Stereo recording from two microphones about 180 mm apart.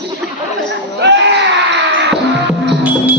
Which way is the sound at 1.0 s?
75° right (ahead or behind).